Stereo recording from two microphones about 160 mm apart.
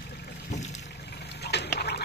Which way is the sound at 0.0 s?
90° left.